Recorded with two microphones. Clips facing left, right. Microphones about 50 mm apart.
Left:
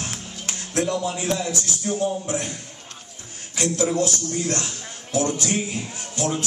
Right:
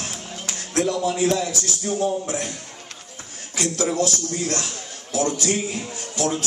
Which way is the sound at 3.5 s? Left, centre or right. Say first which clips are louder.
Left 1 dB; left.